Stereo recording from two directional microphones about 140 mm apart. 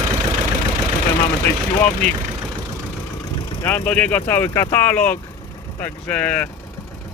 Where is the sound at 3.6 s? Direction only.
10° left (ahead or behind).